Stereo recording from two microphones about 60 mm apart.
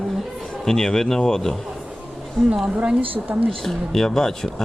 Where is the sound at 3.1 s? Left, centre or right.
Right.